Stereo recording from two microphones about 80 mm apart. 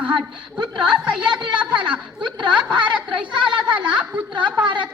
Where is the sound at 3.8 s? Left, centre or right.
Centre.